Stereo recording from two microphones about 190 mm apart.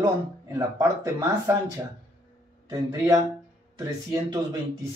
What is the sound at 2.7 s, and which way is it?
A man's voice, 20° right (ahead or behind).